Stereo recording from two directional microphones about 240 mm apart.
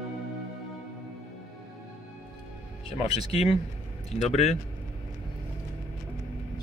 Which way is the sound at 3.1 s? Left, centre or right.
Left.